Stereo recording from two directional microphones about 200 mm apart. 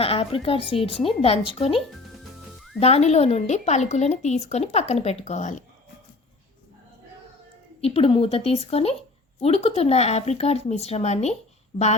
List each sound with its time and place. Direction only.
0.0 s speech: 30° left (ahead or behind)
2.8 s speech: 30° left (ahead or behind)
7.8 s speech: 30° left (ahead or behind)